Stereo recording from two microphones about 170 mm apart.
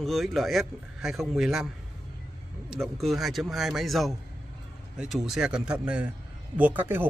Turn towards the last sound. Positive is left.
turn(degrees=-10)  # may be behind; listen again after turning